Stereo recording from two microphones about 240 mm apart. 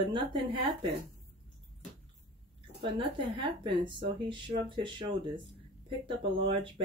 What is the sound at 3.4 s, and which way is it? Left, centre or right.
Speech, centre.